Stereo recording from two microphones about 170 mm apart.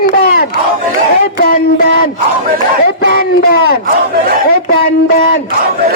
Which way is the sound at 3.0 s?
60° left (ahead or behind).